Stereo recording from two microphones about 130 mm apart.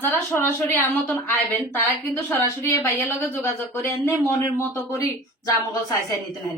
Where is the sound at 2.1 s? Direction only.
20° left (ahead or behind).